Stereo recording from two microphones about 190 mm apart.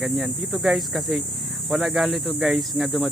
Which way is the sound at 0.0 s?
Centre (ahead or behind).